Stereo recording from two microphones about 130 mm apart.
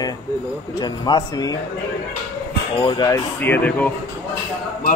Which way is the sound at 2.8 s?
35° left (ahead or behind).